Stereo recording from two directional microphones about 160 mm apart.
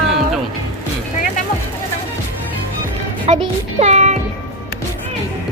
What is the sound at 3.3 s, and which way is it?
Speech, 40° right (ahead or behind).